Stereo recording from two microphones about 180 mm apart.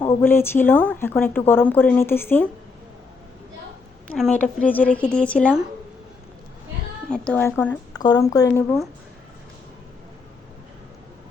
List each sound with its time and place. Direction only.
0.0 s speech: 15° left (ahead or behind)
4.1 s speech: 5° left (ahead or behind)
7.1 s speech: 10° left (ahead or behind)
7.9 s speech: 20° left (ahead or behind)